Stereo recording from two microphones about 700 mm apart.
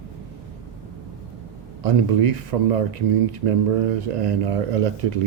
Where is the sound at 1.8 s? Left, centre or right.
Right.